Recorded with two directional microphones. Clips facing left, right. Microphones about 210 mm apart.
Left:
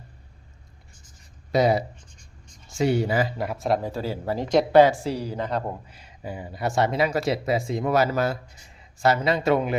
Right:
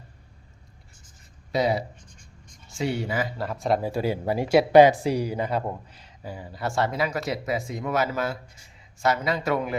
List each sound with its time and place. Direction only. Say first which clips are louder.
1.5 s speech: left 3 dB; 45° left (ahead or behind)
3.3 s speech: left 2 dB; 15° left (ahead or behind)
3.6 s speech: right 2 dB; 5° right (ahead or behind)
5.9 s speech: left 3 dB; 10° left (ahead or behind)